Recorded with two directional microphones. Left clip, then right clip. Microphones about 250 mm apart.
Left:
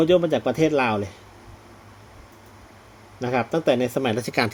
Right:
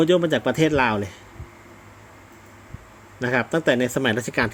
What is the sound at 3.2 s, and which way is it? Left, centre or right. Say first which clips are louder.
A man's voice: right 1 dB; centre.